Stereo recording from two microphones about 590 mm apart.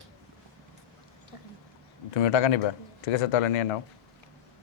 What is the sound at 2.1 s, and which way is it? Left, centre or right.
A man's voice, left.